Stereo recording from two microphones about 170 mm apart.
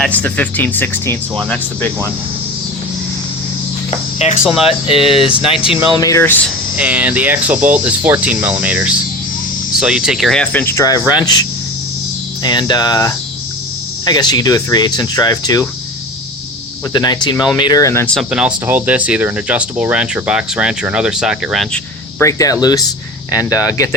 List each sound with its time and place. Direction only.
0.0 s speech: 10° left (ahead or behind)
4.2 s speech: 40° left (ahead or behind)
4.4 s speech: 5° right (ahead or behind)
4.9 s speech: 30° left (ahead or behind)
6.0 s speech: 20° left (ahead or behind)
6.7 s speech: 10° right (ahead or behind); by 15.6 s 20° left (ahead or behind)
16.9 s speech: 25° left (ahead or behind); by 21.8 s centre (ahead or behind)
22.2 s speech: 20° left (ahead or behind)